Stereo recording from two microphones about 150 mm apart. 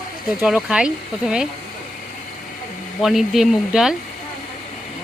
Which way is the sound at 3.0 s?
Centre (ahead or behind).